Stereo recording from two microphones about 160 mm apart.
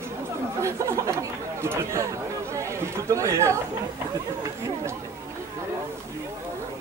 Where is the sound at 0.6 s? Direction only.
20° right (ahead or behind).